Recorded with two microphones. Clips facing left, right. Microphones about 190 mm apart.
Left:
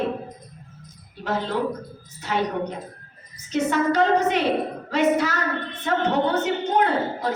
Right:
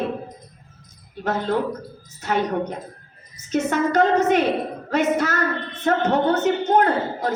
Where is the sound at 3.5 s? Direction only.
45° right (ahead or behind).